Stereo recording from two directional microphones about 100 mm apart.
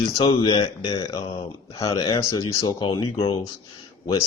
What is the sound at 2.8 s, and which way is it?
Speech, 55° left (ahead or behind).